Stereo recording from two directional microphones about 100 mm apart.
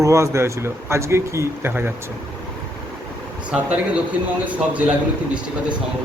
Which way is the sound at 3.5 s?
10° right (ahead or behind).